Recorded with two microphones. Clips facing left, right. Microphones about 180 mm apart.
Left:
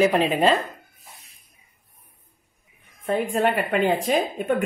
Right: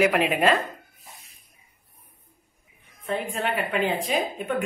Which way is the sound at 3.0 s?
50° left (ahead or behind).